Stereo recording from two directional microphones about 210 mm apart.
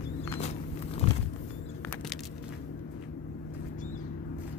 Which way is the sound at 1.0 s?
30° left (ahead or behind).